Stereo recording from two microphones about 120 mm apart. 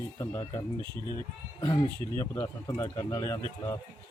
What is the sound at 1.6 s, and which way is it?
Speech, 30° left (ahead or behind).